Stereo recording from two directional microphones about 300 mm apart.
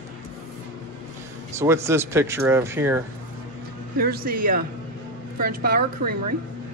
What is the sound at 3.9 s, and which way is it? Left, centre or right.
A woman's voice, right.